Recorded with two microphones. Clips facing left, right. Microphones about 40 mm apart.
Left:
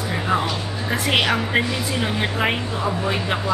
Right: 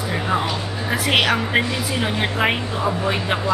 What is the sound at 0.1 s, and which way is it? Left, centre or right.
A woman's voice, centre.